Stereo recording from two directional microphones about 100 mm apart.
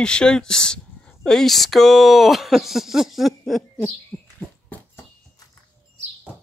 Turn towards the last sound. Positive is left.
turn(degrees=15)  # may be behind; listen again after turning